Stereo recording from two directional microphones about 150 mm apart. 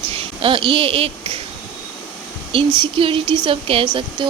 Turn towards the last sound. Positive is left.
turn(degrees=-35)  # may be behind; listen again after turning